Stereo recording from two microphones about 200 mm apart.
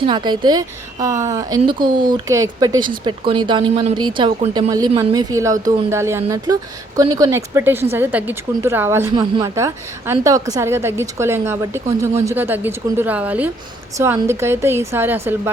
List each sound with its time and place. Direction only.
0.0 s a woman's voice: 20° right (ahead or behind)